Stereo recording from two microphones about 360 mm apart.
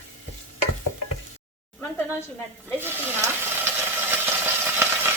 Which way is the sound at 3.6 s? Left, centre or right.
Centre.